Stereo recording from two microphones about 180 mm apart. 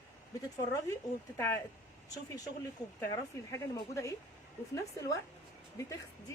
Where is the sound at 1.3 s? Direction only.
15° left (ahead or behind).